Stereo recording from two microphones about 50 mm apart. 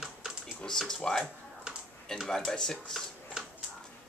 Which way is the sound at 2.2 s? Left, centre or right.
Centre.